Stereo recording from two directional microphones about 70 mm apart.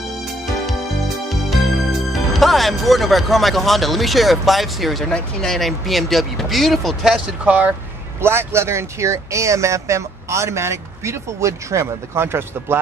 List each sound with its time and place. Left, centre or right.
1.3 s speech: centre
7.4 s speech: centre
8.2 s speech: right